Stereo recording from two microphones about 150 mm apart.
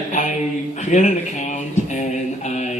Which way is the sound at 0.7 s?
50° left (ahead or behind).